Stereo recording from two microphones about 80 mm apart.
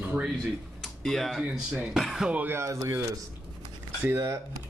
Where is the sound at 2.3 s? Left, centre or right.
Right.